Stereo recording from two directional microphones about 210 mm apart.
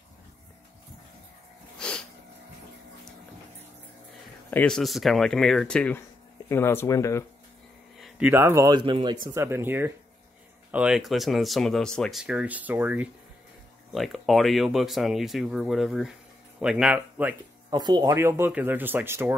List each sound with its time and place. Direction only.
1.8 s sneeze: 5° left (ahead or behind)
4.5 s speech: 5° left (ahead or behind)
8.0 s speech: 10° right (ahead or behind)
9.3 s speech: 10° right (ahead or behind)
17.6 s speech: 20° right (ahead or behind)